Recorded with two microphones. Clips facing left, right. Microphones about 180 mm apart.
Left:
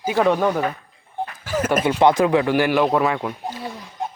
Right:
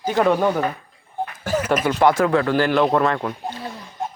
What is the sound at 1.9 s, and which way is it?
Speech, 15° left (ahead or behind).